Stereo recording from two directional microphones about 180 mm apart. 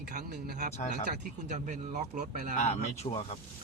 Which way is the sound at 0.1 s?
45° right (ahead or behind).